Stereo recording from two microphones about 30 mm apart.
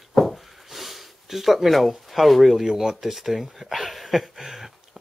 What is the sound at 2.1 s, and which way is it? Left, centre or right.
Speech, centre.